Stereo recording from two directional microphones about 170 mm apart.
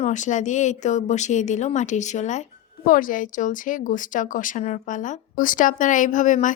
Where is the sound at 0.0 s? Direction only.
45° left (ahead or behind).